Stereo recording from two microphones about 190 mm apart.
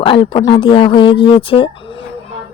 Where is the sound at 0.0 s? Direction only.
25° left (ahead or behind).